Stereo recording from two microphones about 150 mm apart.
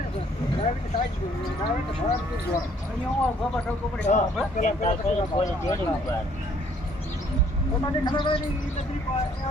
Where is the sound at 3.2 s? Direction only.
10° left (ahead or behind).